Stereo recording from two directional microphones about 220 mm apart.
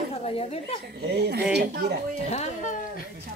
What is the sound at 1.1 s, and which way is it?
Speech, 50° right (ahead or behind).